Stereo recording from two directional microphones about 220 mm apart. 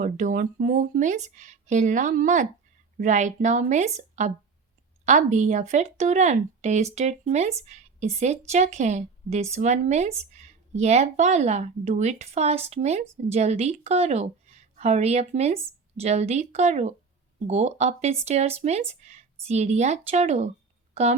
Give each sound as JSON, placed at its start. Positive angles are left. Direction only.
{"t": 0.0, "sound": "a woman's voice", "side_deg": -35}